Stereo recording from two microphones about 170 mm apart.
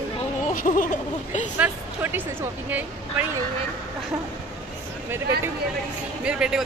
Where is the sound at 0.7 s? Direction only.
55° left (ahead or behind).